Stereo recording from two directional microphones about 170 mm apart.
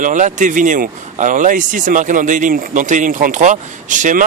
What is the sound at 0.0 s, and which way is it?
Speech, 50° right (ahead or behind).